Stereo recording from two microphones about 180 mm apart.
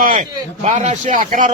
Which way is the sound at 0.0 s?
50° right (ahead or behind).